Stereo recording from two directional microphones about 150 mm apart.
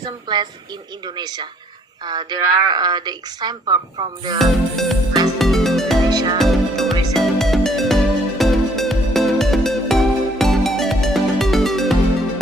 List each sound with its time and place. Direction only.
0.0 s a woman's voice: 30° right (ahead or behind)
4.4 s music: centre (ahead or behind)
6.1 s music: 25° right (ahead or behind)
6.4 s music: centre (ahead or behind)